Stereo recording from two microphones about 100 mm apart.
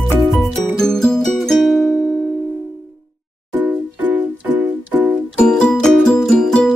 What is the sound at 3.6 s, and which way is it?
Music, 20° right (ahead or behind).